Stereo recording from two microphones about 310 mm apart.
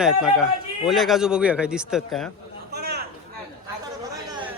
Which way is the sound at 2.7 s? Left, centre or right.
Right.